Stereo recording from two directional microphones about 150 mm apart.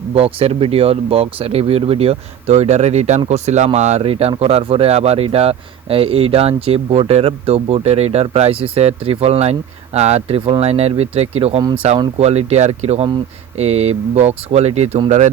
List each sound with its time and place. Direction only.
0.1 s speech: 40° right (ahead or behind)